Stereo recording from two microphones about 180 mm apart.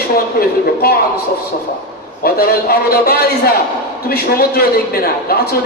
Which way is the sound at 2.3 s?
60° left (ahead or behind).